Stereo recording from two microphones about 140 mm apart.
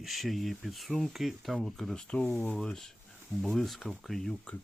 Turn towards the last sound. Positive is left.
turn(degrees=0)  # may be behind; listen again after turning